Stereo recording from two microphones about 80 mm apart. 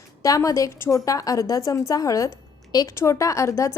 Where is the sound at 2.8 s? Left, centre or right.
Left.